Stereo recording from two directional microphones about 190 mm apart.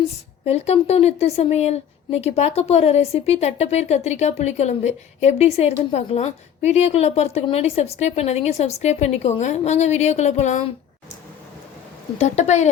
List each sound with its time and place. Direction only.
0.4 s speech: 35° left (ahead or behind)
12.2 s speech: 35° left (ahead or behind)